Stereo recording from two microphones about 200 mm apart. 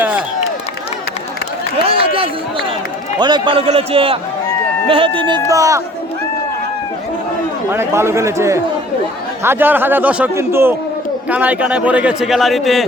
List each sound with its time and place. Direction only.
2.1 s a man's voice: 25° right (ahead or behind)
7.7 s a man's voice: 10° right (ahead or behind)